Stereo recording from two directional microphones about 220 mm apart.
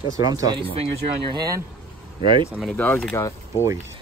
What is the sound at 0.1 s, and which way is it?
Speech, 15° right (ahead or behind).